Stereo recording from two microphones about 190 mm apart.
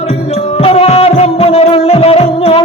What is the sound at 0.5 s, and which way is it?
Music, 30° left (ahead or behind).